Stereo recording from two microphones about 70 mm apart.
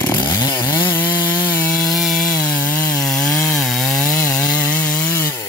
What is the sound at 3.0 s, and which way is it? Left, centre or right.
Chainsaw, centre.